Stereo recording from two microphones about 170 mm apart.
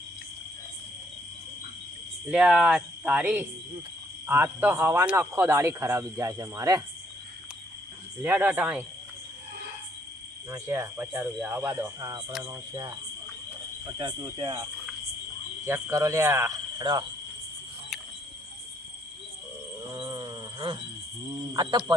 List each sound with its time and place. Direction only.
2.2 s speech: 5° right (ahead or behind)
8.2 s speech: 10° right (ahead or behind)
10.5 s speech: 15° right (ahead or behind)
19.9 s a sound: 30° right (ahead or behind)
21.5 s speech: 25° right (ahead or behind)